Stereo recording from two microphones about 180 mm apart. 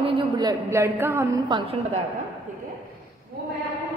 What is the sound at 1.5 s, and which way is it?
Speech, 25° right (ahead or behind).